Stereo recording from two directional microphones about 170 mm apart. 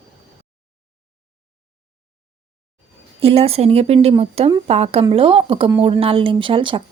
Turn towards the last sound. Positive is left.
turn(degrees=-30)  # may be behind; listen again after turning